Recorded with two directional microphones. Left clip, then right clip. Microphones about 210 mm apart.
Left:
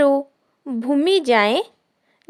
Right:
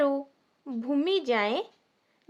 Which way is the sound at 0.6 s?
35° left (ahead or behind).